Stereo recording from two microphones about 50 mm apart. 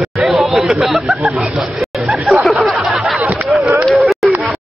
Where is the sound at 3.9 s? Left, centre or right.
Centre.